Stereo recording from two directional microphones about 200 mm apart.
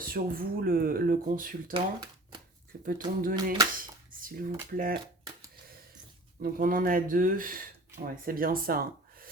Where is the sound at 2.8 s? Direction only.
45° right (ahead or behind).